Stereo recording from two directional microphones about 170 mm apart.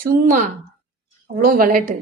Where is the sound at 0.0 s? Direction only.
55° right (ahead or behind).